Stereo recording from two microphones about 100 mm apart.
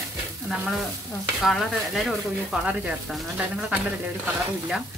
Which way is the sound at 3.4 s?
15° right (ahead or behind).